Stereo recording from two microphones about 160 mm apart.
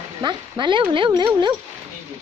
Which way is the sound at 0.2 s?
30° right (ahead or behind).